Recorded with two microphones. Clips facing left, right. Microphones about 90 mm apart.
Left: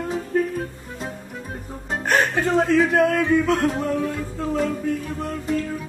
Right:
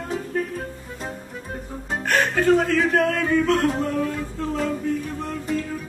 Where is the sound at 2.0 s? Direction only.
20° left (ahead or behind).